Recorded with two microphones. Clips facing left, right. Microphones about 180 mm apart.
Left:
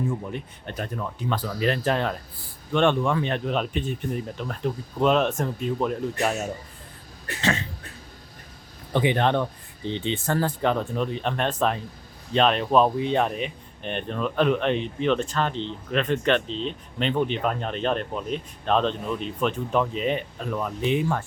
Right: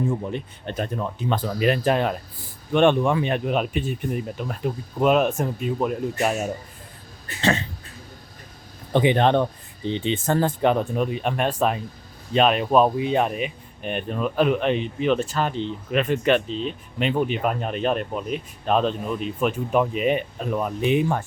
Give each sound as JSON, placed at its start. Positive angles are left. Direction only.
{"t": 0.3, "sound": "speech", "side_deg": -25}
{"t": 8.9, "sound": "speech", "side_deg": -20}
{"t": 9.8, "sound": "speech", "side_deg": -15}